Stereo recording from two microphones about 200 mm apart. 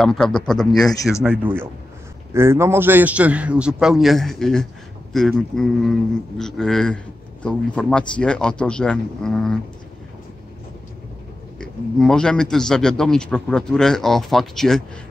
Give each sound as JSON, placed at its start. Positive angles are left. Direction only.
{"t": 0.0, "sound": "a man's voice", "side_deg": 0}
{"t": 11.5, "sound": "a man's voice", "side_deg": 5}